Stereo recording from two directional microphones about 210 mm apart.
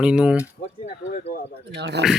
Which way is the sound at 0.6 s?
35° left (ahead or behind).